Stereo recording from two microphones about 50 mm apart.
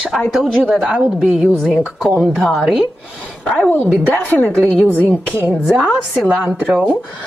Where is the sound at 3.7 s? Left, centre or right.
Left.